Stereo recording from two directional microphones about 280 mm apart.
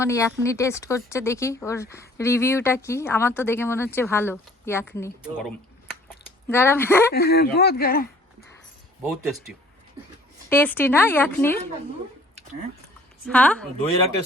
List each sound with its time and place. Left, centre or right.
0.0 s speech: centre
7.1 s speech: left
10.5 s speech: centre
13.2 s speech: centre